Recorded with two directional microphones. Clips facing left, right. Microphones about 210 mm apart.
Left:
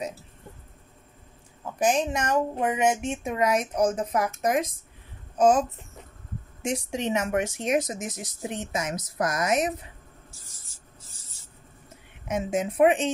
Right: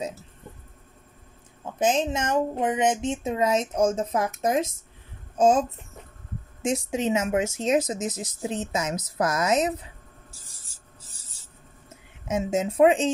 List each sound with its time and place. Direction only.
1.8 s speech: 25° right (ahead or behind)
6.9 s speech: 20° right (ahead or behind)
12.3 s speech: 25° right (ahead or behind)